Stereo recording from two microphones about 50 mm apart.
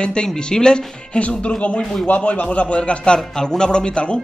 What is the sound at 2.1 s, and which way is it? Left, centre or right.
Speech, left.